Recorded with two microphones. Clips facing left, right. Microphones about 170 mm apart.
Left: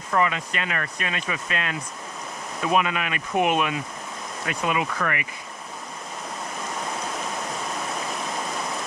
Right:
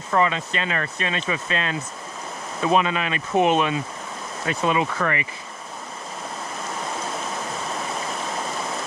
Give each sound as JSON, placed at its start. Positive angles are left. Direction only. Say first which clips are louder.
{"t": 0.1, "sound": "speech", "louder": "right 2 dB", "side_deg": -25}